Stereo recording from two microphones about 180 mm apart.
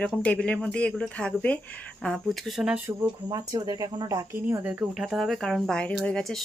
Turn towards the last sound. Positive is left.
turn(degrees=5)  # may be behind; listen again after turning